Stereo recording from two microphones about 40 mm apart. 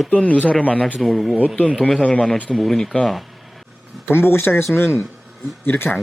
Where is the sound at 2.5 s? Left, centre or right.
Centre.